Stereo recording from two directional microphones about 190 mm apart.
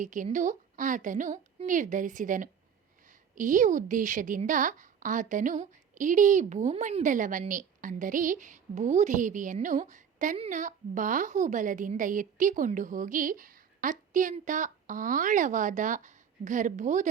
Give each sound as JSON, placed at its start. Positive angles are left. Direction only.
{"t": 0.0, "sound": "a woman's voice", "side_deg": -40}